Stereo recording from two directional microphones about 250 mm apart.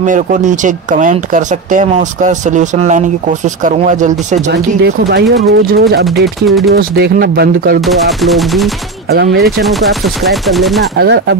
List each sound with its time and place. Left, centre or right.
0.0 s speech: right
4.5 s speech: right
6.2 s speech: centre
6.7 s speech: right
7.8 s speech: centre
9.1 s speech: right
9.4 s speech: centre
11.0 s speech: right